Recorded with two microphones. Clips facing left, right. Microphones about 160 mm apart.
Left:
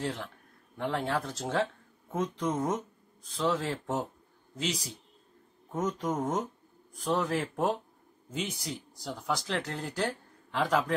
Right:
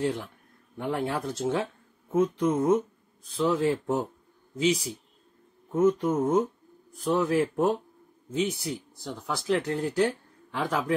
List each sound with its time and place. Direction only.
0.0 s speech: 10° right (ahead or behind)
5.8 s speech: 10° right (ahead or behind)